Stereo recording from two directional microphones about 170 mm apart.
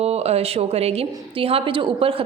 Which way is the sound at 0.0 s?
40° right (ahead or behind).